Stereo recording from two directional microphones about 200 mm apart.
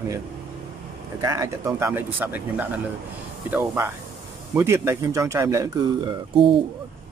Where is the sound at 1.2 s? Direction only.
15° right (ahead or behind).